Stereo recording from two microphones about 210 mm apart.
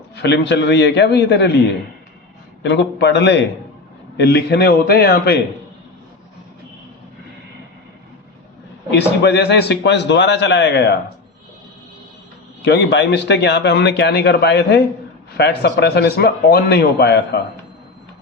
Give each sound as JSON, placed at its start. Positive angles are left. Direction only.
{"t": 0.2, "sound": "a man's voice", "side_deg": 55}
{"t": 2.6, "sound": "a man's voice", "side_deg": 55}
{"t": 8.9, "sound": "a man's voice", "side_deg": 55}
{"t": 12.6, "sound": "a man's voice", "side_deg": 55}